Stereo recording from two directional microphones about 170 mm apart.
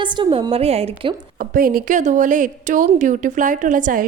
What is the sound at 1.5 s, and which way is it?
A woman's voice, 55° right (ahead or behind).